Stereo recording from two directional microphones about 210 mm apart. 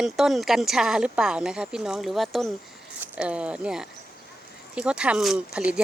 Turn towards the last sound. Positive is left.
turn(degrees=-5)  # may be behind; listen again after turning